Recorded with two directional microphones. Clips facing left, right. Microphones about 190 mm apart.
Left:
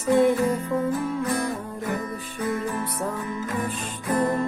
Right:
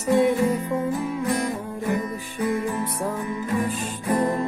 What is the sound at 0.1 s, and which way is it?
Music, 15° right (ahead or behind).